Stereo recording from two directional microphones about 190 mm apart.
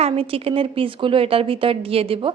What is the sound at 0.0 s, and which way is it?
Speech, 30° right (ahead or behind).